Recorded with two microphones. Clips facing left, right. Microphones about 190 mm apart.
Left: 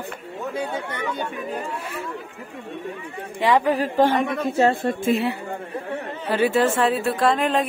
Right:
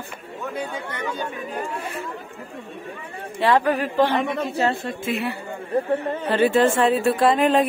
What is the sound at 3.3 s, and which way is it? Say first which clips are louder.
Speech: even; 15° left (ahead or behind).